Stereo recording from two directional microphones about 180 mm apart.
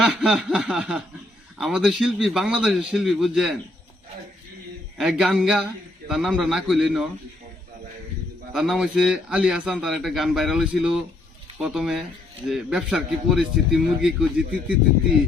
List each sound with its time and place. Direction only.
0.0 s a man's voice: centre (ahead or behind)
4.9 s a man's voice: 5° right (ahead or behind)
8.5 s a man's voice: centre (ahead or behind)